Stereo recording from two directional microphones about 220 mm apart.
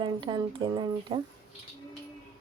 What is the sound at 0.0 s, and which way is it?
Speech, 20° right (ahead or behind).